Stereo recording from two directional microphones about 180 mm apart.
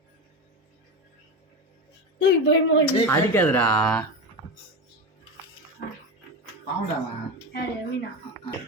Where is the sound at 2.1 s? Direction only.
75° left (ahead or behind).